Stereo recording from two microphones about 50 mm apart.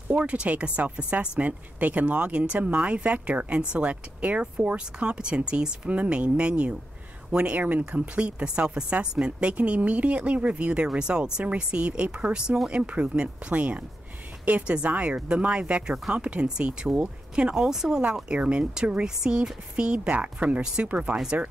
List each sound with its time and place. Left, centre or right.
0.1 s speech: right
17.6 s speech: centre; by 21.2 s right